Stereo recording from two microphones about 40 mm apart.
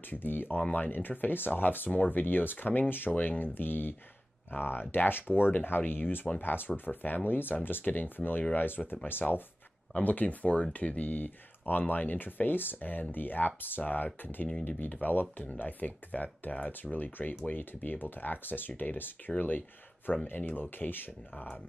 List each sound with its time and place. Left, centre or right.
0.1 s speech: left
10.0 s speech: left